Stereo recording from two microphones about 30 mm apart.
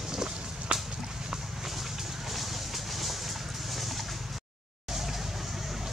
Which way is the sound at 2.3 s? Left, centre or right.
Centre.